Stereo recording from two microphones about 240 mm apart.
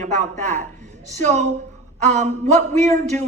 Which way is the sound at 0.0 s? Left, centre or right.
Right.